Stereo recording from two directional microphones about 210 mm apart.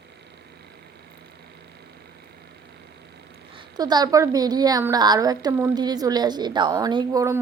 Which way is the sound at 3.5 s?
20° right (ahead or behind).